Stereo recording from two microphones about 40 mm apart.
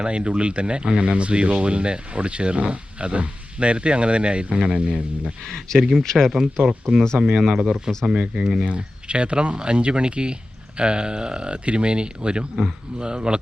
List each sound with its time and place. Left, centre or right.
0.0 s speech: right
5.4 s speech: centre
7.3 s speech: centre
8.6 s speech: right